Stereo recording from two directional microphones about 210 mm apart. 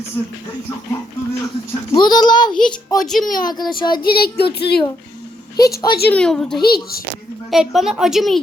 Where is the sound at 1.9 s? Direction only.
20° left (ahead or behind).